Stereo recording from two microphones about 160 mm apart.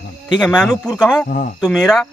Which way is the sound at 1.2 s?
55° left (ahead or behind).